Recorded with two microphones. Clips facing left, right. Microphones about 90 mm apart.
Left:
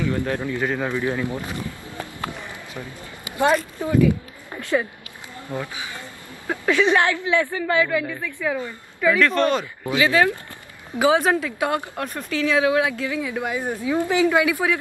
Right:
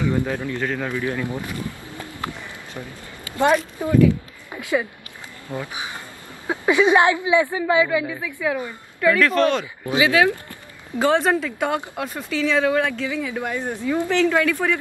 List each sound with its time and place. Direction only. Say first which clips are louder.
0.0 s a woman's voice: right 2 dB; 15° right (ahead or behind)
0.4 s a woman's voice: left 1 dB; 15° left (ahead or behind)
3.3 s a sound: right 1 dB; 20° left (ahead or behind)
3.8 s a woman's voice: right 2 dB; 15° right (ahead or behind)
9.0 s speech: right 1 dB; centre (ahead or behind)
9.8 s speech: right 1 dB; 20° right (ahead or behind)
11.0 s a woman's voice: even; 5° left (ahead or behind)